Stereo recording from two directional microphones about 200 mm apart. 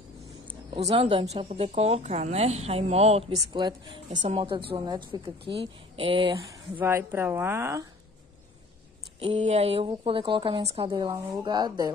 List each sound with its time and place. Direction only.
0.5 s a woman's voice: 30° right (ahead or behind)
6.3 s speech: 15° right (ahead or behind)
9.2 s a woman's voice: 30° right (ahead or behind)